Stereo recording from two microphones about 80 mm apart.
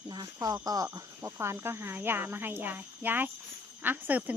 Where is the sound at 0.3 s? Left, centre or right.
Right.